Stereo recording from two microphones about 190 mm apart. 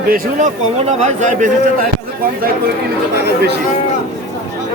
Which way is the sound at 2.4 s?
50° right (ahead or behind).